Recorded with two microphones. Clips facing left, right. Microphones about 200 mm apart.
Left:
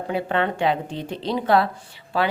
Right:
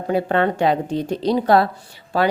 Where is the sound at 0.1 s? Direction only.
40° right (ahead or behind).